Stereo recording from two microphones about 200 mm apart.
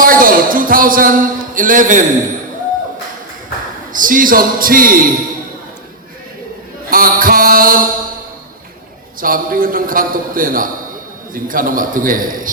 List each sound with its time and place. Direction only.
0.0 s speech: 45° right (ahead or behind)
3.9 s a man's voice: 45° right (ahead or behind)
6.9 s a man's voice: 45° right (ahead or behind)
9.2 s a man's voice: 45° right (ahead or behind)